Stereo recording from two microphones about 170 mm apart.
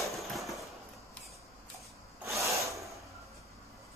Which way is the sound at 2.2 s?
15° right (ahead or behind).